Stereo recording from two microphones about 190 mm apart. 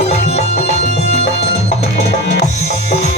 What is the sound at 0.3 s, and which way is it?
Music, 35° left (ahead or behind).